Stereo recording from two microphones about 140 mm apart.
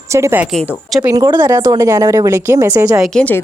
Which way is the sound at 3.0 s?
5° left (ahead or behind).